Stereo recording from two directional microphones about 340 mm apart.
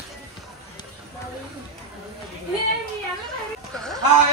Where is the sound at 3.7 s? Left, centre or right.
Centre.